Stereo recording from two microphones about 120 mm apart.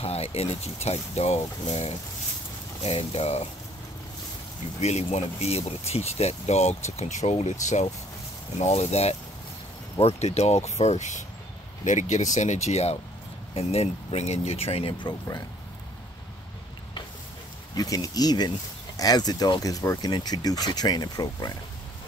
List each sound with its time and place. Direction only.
0.0 s speech: 55° left (ahead or behind)
4.7 s speech: 65° left (ahead or behind); by 12.3 s 85° left
12.4 s speech: 70° left (ahead or behind); by 15.1 s 45° left (ahead or behind)
17.7 s speech: 30° left (ahead or behind)